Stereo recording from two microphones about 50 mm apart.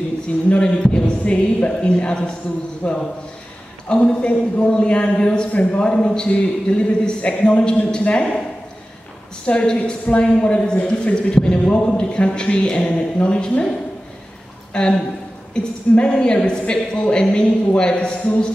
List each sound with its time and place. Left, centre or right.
0.5 s a woman's voice: left
9.5 s a woman's voice: left
14.7 s a woman's voice: left